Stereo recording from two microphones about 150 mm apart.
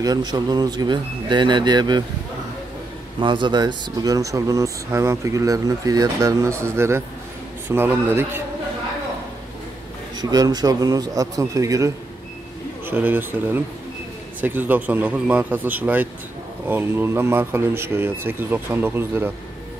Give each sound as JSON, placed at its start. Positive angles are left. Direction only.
{"t": 0.0, "sound": "speech", "side_deg": -25}
{"t": 3.2, "sound": "speech", "side_deg": -30}
{"t": 10.1, "sound": "speech", "side_deg": -25}